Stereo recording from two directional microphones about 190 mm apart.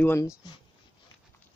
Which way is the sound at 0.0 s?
15° left (ahead or behind).